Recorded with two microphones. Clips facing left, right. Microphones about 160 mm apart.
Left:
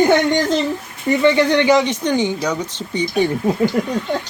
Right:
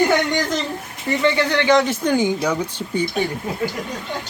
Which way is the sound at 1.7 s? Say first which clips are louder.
Left 1 dB; 5° right (ahead or behind).